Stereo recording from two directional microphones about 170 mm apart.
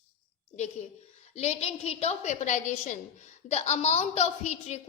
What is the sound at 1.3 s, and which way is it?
A woman's voice, 40° left (ahead or behind).